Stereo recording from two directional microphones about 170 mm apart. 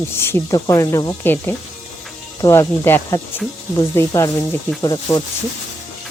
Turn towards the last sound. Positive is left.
turn(degrees=20)  # may be behind; listen again after turning